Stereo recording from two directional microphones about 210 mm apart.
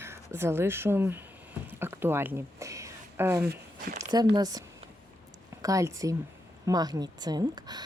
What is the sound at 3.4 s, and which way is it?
Speech, 45° right (ahead or behind).